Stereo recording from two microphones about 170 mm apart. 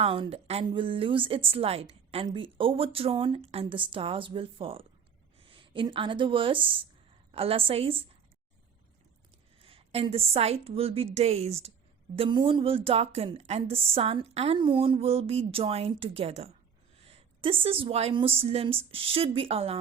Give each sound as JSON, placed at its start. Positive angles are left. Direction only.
{"t": 0.0, "sound": "a woman's voice", "side_deg": -35}
{"t": 9.6, "sound": "a woman's voice", "side_deg": -35}